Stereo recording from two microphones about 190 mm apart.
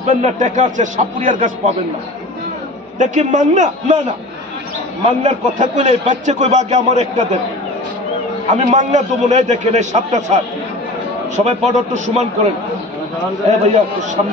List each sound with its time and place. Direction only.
0.0 s a man's voice: 40° right (ahead or behind)
3.0 s a man's voice: 40° right (ahead or behind)
5.0 s a man's voice: 40° right (ahead or behind)
8.5 s a man's voice: 40° right (ahead or behind)
13.5 s a man's voice: 40° right (ahead or behind)